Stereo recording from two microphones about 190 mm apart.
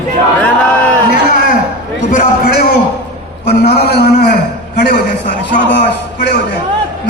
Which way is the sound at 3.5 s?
55° left (ahead or behind).